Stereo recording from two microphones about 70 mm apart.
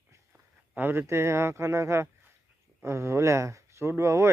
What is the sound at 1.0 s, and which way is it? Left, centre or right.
Speech, right.